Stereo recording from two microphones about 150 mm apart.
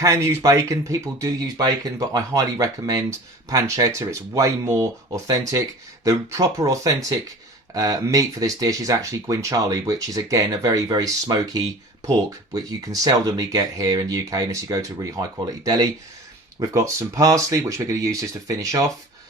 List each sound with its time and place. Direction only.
0.0 s speech: 20° right (ahead or behind)